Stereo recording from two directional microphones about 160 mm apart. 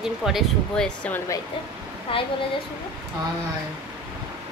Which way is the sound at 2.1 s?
35° left (ahead or behind).